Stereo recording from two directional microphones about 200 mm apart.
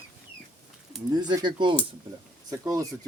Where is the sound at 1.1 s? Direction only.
20° right (ahead or behind).